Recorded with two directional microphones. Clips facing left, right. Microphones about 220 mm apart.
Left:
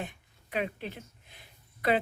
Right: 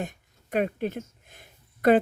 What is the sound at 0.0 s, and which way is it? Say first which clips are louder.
Speech: right 5 dB; 45° right (ahead or behind).